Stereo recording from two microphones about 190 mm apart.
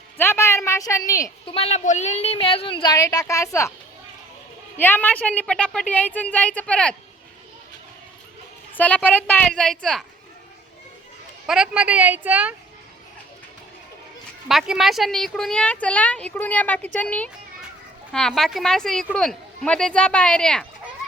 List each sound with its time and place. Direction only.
0.2 s speech: 10° left (ahead or behind)
1.5 s speech: 35° left (ahead or behind); by 3.7 s 15° left (ahead or behind)
4.8 s speech: 10° left (ahead or behind)
8.7 s speech: 10° left (ahead or behind)
11.4 s a woman's voice: 5° right (ahead or behind)
14.4 s speech: centre (ahead or behind)